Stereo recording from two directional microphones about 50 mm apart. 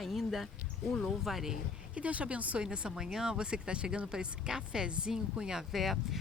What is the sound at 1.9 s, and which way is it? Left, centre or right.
Speech, right.